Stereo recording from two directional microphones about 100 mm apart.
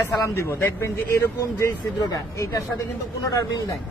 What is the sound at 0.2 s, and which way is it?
A man's voice, 25° left (ahead or behind).